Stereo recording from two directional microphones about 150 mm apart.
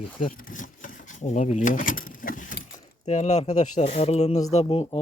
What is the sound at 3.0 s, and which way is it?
Speech, 50° left (ahead or behind).